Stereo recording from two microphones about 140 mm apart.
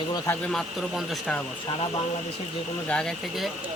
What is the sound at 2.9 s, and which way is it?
Speech, 5° left (ahead or behind).